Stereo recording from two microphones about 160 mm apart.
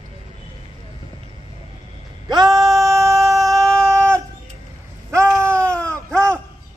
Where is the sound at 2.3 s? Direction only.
25° right (ahead or behind).